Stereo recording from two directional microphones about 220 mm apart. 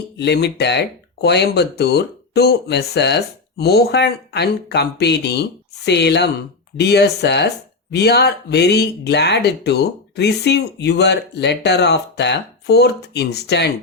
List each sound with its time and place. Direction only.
0.2 s speech: 50° left (ahead or behind)